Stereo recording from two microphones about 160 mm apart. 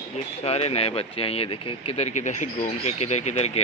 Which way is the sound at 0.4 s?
40° left (ahead or behind).